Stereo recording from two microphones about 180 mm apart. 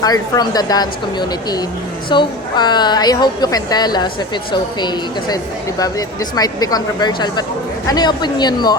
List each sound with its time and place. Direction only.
0.0 s a woman's voice: 20° left (ahead or behind)
2.0 s a woman's voice: 25° left (ahead or behind)